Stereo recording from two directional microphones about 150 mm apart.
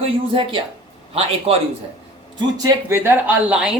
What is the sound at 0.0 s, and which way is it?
Speech, 35° right (ahead or behind).